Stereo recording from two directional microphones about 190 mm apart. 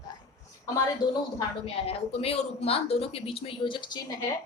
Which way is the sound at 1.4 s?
30° left (ahead or behind).